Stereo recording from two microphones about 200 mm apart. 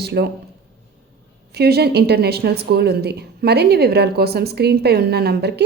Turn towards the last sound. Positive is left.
turn(degrees=-55)  # may be behind; listen again after turning